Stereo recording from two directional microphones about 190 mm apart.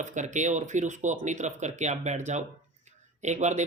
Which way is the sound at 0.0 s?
40° right (ahead or behind).